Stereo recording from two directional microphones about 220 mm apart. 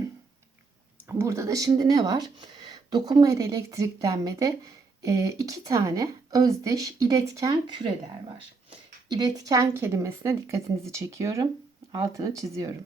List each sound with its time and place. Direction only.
1.0 s speech: 15° right (ahead or behind)
9.0 s speech: 20° right (ahead or behind)